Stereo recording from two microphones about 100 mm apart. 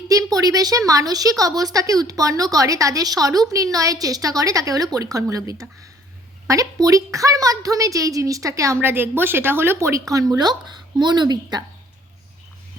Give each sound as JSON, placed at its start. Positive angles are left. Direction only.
{"t": 0.1, "sound": "speech", "side_deg": -35}